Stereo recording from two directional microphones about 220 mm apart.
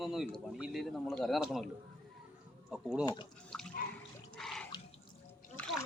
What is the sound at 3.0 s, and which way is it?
Speech, 20° left (ahead or behind).